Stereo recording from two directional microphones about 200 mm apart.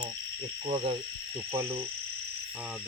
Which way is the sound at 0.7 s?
25° right (ahead or behind).